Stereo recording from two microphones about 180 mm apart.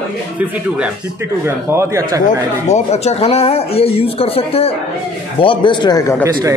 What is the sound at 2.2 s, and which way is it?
A man's voice, 35° left (ahead or behind).